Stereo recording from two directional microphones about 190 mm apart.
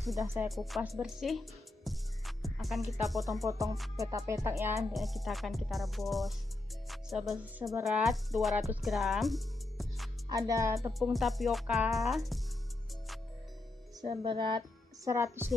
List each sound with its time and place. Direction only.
0.2 s speech: 10° right (ahead or behind)
0.5 s speech: centre (ahead or behind)
3.4 s speech: 15° right (ahead or behind)
3.7 s speech: centre (ahead or behind)
4.3 s speech: 15° right (ahead or behind)
4.9 s speech: centre (ahead or behind)
10.3 s speech: 15° right (ahead or behind)
10.9 s speech: centre (ahead or behind)
14.0 s speech: 25° right (ahead or behind)
15.0 s speech: 15° right (ahead or behind)